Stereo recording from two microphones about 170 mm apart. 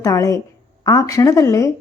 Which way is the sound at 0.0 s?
20° left (ahead or behind).